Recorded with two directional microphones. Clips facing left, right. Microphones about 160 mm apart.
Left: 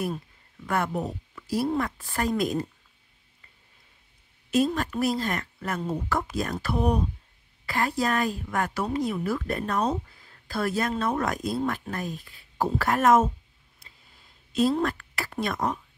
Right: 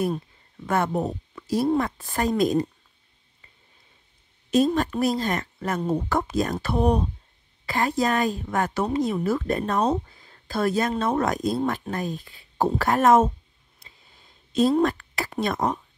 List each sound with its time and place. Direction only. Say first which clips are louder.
0.7 s speech: right 4 dB; 25° right (ahead or behind)
4.5 s speech: right 4 dB; 25° right (ahead or behind)
14.5 s a woman's voice: right 4 dB; 25° right (ahead or behind)